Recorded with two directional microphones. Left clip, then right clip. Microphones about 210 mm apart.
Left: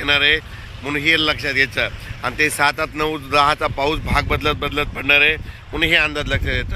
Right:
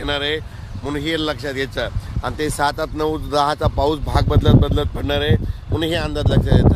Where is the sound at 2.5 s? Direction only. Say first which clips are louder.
Left 2 dB; centre (ahead or behind).